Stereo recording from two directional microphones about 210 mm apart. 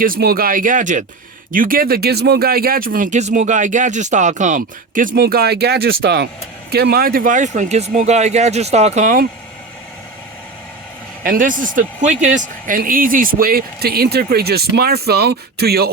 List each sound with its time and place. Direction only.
0.0 s speech: 45° right (ahead or behind)
11.2 s speech: 40° right (ahead or behind)